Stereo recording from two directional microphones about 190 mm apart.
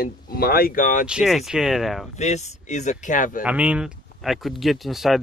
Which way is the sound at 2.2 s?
35° left (ahead or behind).